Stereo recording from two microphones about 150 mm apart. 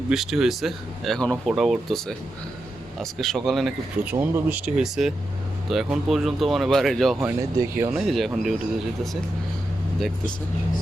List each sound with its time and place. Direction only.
0.1 s speech: 5° right (ahead or behind)
7.2 s speech: 15° right (ahead or behind)
7.9 s speech: centre (ahead or behind)